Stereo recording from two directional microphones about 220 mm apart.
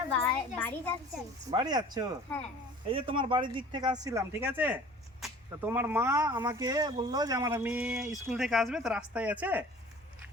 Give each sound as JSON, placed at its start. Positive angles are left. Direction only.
{"t": 0.1, "sound": "a sound", "side_deg": 5}
{"t": 1.5, "sound": "speech", "side_deg": -20}
{"t": 2.3, "sound": "speech", "side_deg": 10}
{"t": 2.9, "sound": "speech", "side_deg": -25}